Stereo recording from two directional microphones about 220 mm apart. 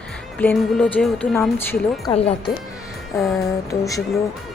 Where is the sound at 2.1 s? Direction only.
25° left (ahead or behind).